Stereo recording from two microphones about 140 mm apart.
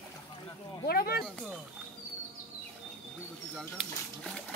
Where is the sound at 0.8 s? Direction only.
90° left.